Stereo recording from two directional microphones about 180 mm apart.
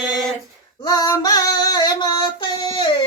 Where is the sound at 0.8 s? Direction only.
20° left (ahead or behind).